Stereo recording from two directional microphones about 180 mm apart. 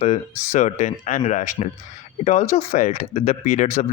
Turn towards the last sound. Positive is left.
turn(degrees=40)  # may be behind; listen again after turning